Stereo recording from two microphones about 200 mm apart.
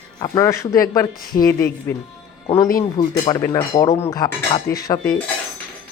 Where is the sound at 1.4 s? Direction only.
15° left (ahead or behind).